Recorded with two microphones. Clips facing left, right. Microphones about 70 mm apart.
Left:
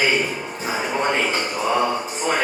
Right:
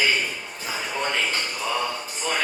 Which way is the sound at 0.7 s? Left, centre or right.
Left.